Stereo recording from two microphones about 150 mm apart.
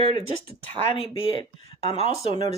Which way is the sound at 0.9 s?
40° left (ahead or behind).